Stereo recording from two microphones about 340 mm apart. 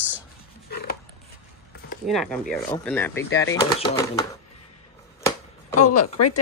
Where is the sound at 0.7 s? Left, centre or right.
Left.